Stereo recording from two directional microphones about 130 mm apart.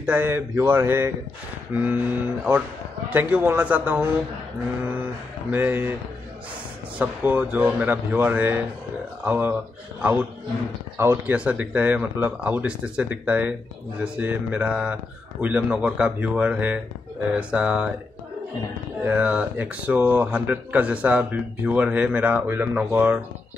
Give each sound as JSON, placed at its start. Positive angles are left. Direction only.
{"t": 0.0, "sound": "speech", "side_deg": -15}
{"t": 5.5, "sound": "speech", "side_deg": -15}
{"t": 7.0, "sound": "speech", "side_deg": -10}
{"t": 11.0, "sound": "speech", "side_deg": -20}
{"t": 19.0, "sound": "speech", "side_deg": -10}